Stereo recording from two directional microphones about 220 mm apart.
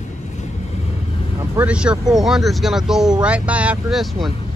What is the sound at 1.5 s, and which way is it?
Speech, 5° right (ahead or behind).